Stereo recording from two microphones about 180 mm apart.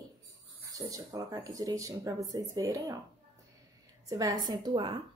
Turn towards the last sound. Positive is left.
turn(degrees=-25)  # may be behind; listen again after turning